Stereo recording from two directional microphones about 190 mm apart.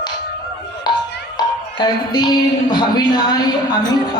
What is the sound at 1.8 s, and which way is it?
A man's voice, 20° left (ahead or behind).